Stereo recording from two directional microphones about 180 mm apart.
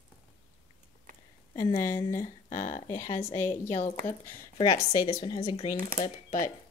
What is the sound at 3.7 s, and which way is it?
Speech, 40° left (ahead or behind).